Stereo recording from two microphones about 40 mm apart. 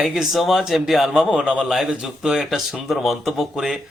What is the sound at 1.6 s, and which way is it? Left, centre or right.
Speech, centre.